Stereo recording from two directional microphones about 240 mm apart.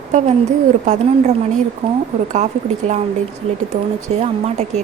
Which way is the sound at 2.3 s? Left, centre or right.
Right.